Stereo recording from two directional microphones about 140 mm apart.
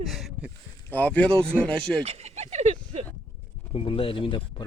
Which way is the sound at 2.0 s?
50° right (ahead or behind).